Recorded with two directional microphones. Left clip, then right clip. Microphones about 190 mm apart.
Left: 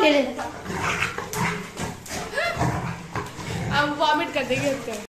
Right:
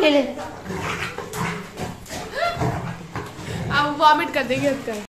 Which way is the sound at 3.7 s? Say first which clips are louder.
Right 5 dB; 60° right (ahead or behind).